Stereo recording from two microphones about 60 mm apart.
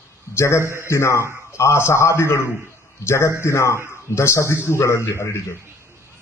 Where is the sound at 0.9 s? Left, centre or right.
Left.